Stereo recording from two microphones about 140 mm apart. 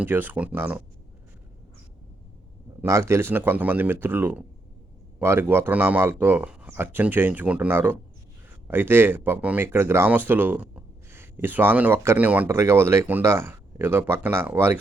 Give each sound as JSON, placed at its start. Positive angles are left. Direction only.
{"t": 0.0, "sound": "speech", "side_deg": -15}
{"t": 2.8, "sound": "speech", "side_deg": -20}